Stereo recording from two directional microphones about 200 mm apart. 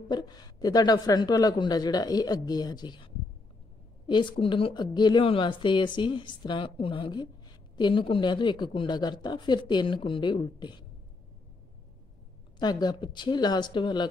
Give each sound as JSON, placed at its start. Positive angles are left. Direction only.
{"t": 0.1, "sound": "a woman's voice", "side_deg": 20}
{"t": 4.1, "sound": "a woman's voice", "side_deg": 25}
{"t": 12.5, "sound": "a woman's voice", "side_deg": 20}